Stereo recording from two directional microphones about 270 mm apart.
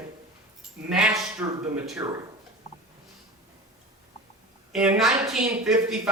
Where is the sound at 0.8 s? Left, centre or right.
Centre.